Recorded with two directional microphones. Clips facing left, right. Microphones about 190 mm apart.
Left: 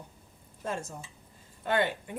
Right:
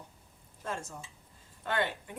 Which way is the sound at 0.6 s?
20° left (ahead or behind).